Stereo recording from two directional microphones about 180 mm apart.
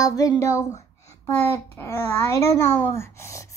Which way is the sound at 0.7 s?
40° left (ahead or behind).